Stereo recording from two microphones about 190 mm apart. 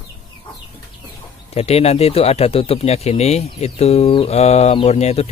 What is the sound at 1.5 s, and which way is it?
Speech, 35° left (ahead or behind).